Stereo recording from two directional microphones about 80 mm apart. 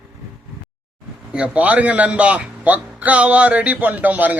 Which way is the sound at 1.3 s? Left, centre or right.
Centre.